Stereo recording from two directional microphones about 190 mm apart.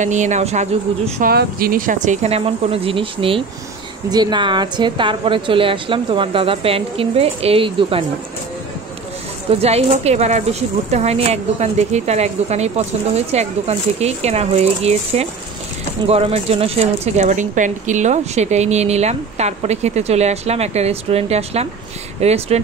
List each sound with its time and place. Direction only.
0.0 s speech: 40° right (ahead or behind)
1.2 s a woman's voice: 50° right (ahead or behind); by 8.0 s 30° right (ahead or behind)
9.5 s speech: 35° right (ahead or behind)